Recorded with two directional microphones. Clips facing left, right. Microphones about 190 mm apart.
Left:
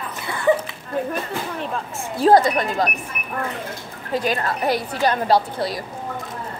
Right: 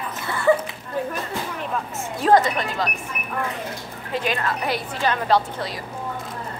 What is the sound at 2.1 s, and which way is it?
Speech, 35° left (ahead or behind).